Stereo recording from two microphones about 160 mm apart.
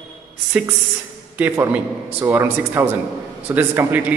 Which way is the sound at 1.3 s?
10° right (ahead or behind).